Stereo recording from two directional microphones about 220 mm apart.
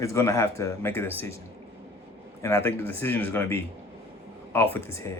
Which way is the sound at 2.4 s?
10° left (ahead or behind).